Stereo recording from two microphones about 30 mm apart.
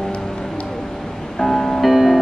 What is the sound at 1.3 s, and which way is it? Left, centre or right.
Music, centre.